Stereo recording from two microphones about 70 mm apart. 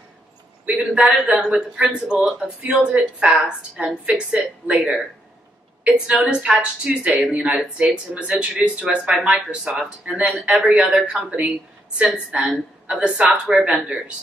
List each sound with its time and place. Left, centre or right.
0.7 s a man's voice: centre
6.2 s a man's voice: centre
10.8 s a man's voice: centre
11.1 s a man's voice: centre